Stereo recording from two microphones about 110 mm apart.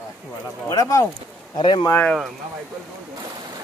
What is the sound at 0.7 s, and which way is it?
Speech, 30° left (ahead or behind).